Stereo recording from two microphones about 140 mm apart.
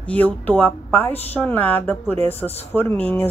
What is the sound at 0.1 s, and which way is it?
Speech, 10° left (ahead or behind).